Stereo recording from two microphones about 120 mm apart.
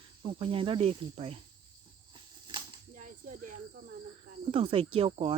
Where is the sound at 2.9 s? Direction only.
90° right.